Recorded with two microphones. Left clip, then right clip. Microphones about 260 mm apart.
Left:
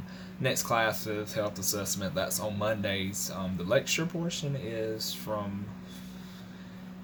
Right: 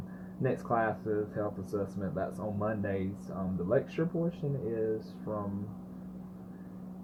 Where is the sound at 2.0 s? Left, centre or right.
Left.